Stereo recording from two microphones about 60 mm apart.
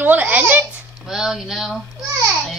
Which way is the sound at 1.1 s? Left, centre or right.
Centre.